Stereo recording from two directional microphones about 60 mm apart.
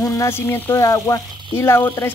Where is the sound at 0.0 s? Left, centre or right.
Left.